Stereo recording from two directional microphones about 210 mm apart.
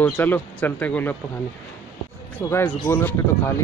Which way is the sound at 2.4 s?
10° left (ahead or behind).